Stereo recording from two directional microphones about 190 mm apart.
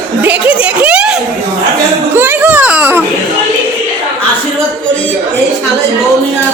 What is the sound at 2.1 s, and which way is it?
Baby cry, 10° right (ahead or behind).